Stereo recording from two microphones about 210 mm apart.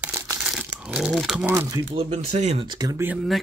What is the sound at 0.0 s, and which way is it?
Crumpling, 15° right (ahead or behind).